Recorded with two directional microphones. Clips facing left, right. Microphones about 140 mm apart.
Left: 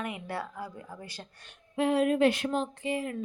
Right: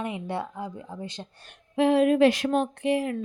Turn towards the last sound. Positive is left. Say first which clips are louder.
# right 7 dB
turn(degrees=-75)  # may be behind; listen again after turning